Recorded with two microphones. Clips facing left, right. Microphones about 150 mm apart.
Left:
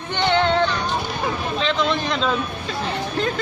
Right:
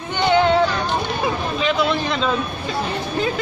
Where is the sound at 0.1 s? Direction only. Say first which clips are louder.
Right 3 dB; 5° right (ahead or behind).